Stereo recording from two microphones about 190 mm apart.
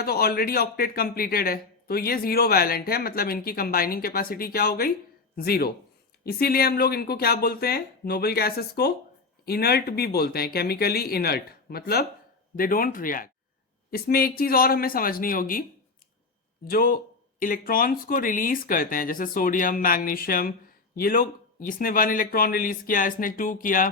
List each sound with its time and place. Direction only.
0.0 s speech: 55° left (ahead or behind)
16.6 s speech: 50° left (ahead or behind)